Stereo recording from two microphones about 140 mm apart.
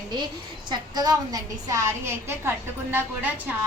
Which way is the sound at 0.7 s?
30° right (ahead or behind).